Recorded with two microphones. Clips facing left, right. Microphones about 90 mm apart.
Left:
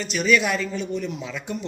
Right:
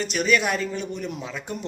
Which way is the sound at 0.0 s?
45° right (ahead or behind).